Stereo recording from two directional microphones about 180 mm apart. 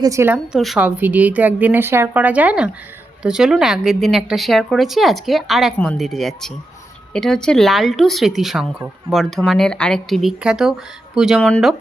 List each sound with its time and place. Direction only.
0.0 s a woman's voice: 15° right (ahead or behind)
0.5 s a woman's voice: centre (ahead or behind)